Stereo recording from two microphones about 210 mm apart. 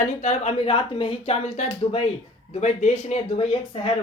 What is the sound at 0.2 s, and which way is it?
Speech, 35° left (ahead or behind).